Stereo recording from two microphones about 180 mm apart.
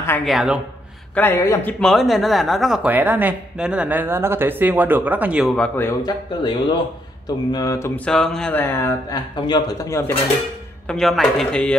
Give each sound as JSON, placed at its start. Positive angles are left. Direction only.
{"t": 0.2, "sound": "speech", "side_deg": 0}
{"t": 1.1, "sound": "speech", "side_deg": 10}
{"t": 5.8, "sound": "a man's voice", "side_deg": 20}
{"t": 7.2, "sound": "a sound", "side_deg": 20}
{"t": 10.9, "sound": "speech", "side_deg": 0}